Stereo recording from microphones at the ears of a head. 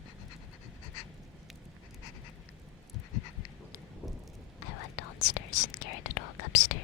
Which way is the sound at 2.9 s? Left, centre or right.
Left.